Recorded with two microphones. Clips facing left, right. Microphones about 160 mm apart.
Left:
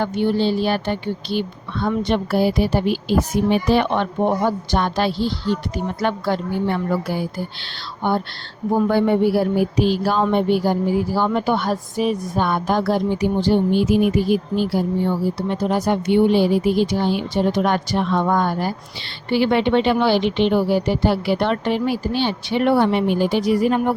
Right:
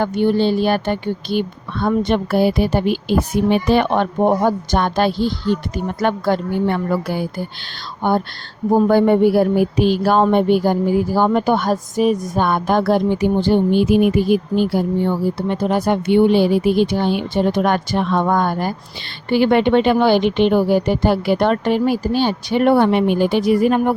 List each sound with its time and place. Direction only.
0.0 s a woman's voice: 50° right (ahead or behind)